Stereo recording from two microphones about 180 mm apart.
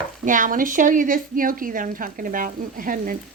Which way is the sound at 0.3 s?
45° right (ahead or behind).